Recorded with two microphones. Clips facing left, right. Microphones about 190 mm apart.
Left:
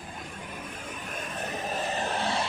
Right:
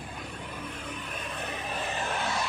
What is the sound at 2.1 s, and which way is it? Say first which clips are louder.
Music: left 1 dB; 30° left (ahead or behind).